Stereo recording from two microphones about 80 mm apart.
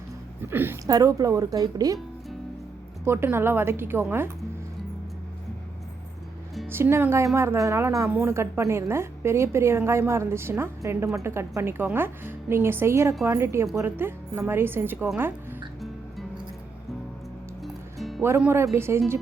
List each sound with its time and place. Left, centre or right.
0.4 s a woman's voice: right
0.9 s a woman's voice: right
3.0 s a woman's voice: right
6.7 s a woman's voice: right
17.6 s music: centre
18.5 s a woman's voice: right